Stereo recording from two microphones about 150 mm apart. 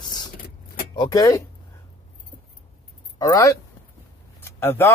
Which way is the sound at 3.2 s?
20° left (ahead or behind).